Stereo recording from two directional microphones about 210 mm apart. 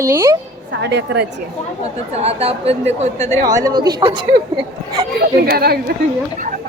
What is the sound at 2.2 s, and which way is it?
A woman's voice, 30° right (ahead or behind).